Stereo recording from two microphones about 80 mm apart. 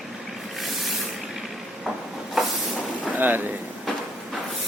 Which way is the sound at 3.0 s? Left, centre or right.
Right.